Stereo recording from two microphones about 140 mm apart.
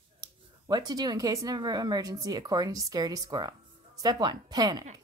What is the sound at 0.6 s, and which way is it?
A woman's voice, 30° right (ahead or behind).